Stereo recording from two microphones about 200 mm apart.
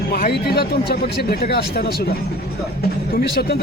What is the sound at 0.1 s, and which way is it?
Speech, 50° left (ahead or behind).